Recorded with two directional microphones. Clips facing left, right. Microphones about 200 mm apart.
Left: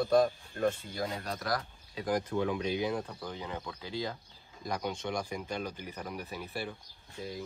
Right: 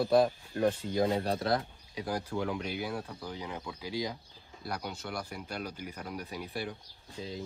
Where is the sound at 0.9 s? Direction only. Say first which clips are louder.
Right 8 dB; 30° right (ahead or behind).